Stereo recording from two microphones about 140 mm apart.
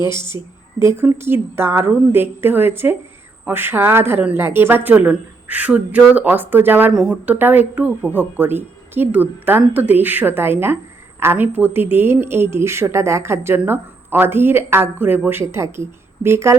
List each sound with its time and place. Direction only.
0.0 s a woman's voice: 30° left (ahead or behind)
0.8 s a woman's voice: 15° right (ahead or behind)